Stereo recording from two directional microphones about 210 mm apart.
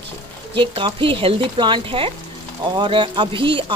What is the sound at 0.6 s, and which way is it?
Speech, 25° right (ahead or behind).